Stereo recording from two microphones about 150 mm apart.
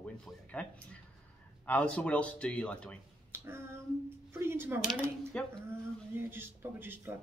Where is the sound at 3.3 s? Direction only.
15° right (ahead or behind).